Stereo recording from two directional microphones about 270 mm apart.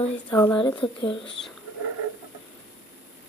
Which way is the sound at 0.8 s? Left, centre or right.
Centre.